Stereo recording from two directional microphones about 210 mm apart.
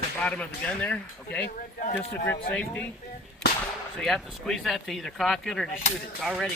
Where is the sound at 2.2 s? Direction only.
10° left (ahead or behind).